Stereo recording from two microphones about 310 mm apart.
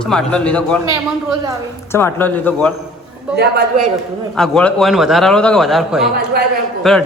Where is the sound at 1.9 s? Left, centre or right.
Centre.